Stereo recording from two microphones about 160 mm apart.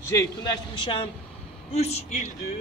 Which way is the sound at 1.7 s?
40° left (ahead or behind).